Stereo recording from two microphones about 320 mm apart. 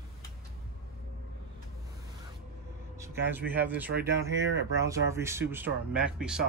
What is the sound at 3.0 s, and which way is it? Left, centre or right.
Speech, centre.